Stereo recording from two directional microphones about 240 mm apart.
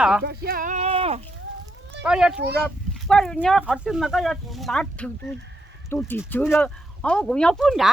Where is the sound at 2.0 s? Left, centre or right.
Centre.